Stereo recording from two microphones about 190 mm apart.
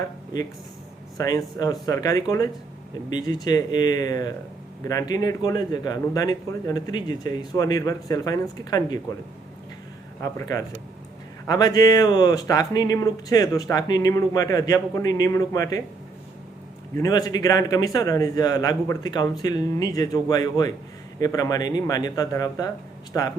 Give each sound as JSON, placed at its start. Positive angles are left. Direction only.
{"t": 1.2, "sound": "speech", "side_deg": 20}
{"t": 10.2, "sound": "speech", "side_deg": 15}
{"t": 17.0, "sound": "speech", "side_deg": 20}